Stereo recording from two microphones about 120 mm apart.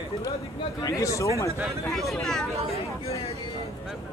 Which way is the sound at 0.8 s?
25° left (ahead or behind).